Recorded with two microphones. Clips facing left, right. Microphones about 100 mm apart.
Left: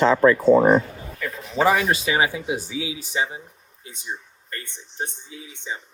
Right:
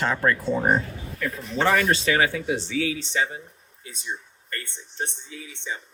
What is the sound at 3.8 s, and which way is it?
Speech, 25° left (ahead or behind).